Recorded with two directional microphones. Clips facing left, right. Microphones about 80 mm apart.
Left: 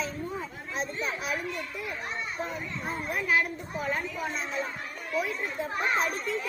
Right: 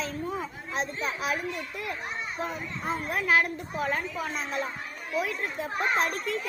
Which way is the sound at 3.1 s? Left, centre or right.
Right.